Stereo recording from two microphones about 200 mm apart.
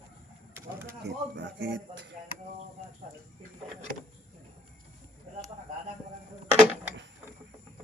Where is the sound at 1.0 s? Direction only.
60° right (ahead or behind).